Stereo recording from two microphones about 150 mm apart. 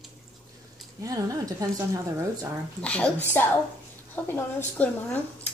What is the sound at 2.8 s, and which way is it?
A woman's voice, 10° left (ahead or behind).